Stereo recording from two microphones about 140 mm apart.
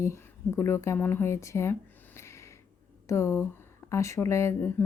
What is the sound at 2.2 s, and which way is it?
Snort, 20° left (ahead or behind).